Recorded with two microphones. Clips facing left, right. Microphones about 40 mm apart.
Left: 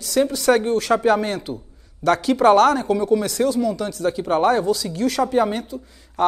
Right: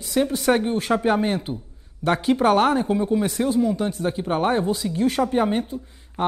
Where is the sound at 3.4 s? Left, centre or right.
Centre.